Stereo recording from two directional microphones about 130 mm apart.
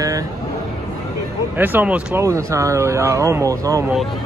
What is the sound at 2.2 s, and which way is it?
Speech, 25° right (ahead or behind).